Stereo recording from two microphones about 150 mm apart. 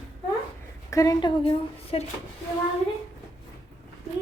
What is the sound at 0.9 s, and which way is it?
Speech, 20° left (ahead or behind).